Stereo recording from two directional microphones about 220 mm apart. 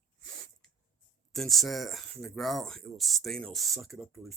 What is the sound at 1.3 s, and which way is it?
Speech, centre (ahead or behind).